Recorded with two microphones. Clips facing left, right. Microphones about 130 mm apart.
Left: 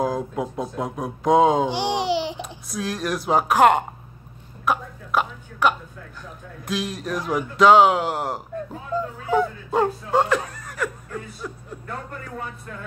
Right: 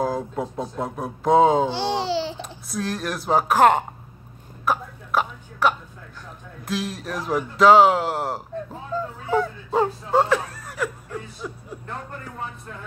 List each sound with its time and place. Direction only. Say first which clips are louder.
0.0 s speech: left 1 dB; centre (ahead or behind)
1.7 s babbling: left 1 dB; 15° left (ahead or behind)
2.4 s speech: even; centre (ahead or behind)
4.6 s a sound: left 1 dB; centre (ahead or behind)
6.6 s speech: left 1 dB; centre (ahead or behind)
9.7 s chuckle: even; centre (ahead or behind)